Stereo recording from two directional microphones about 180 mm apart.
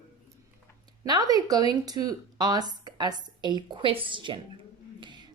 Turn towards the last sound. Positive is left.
turn(degrees=-25)  # may be behind; listen again after turning